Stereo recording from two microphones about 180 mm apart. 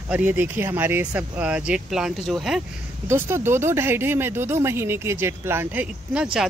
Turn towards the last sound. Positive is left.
turn(degrees=-5)  # may be behind; listen again after turning